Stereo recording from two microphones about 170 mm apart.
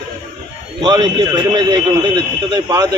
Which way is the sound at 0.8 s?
25° right (ahead or behind).